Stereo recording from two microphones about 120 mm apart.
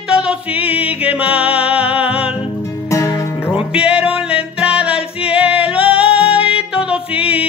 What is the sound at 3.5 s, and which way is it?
Music, 10° right (ahead or behind).